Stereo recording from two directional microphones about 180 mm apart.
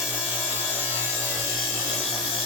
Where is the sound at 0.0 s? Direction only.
5° right (ahead or behind).